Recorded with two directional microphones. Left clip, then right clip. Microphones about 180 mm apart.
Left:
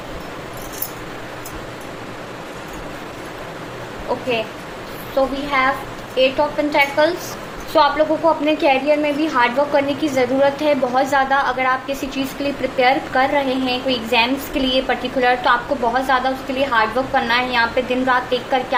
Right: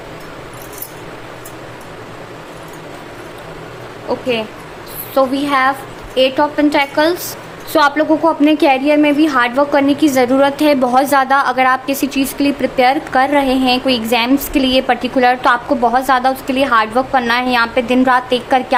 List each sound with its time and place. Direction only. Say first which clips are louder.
5.1 s a woman's voice: right 5 dB; 50° right (ahead or behind)